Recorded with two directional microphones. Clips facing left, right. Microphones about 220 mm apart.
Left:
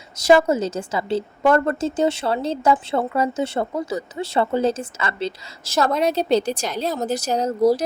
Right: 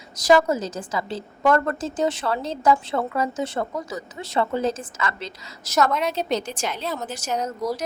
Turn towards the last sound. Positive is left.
turn(degrees=30)  # may be behind; listen again after turning